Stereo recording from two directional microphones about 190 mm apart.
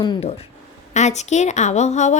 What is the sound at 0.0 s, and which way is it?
Speech, 30° left (ahead or behind).